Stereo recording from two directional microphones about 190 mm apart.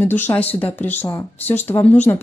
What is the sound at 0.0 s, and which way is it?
Speech, 10° left (ahead or behind).